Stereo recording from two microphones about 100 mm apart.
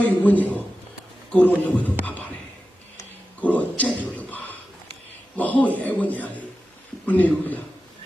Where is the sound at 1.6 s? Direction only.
15° left (ahead or behind).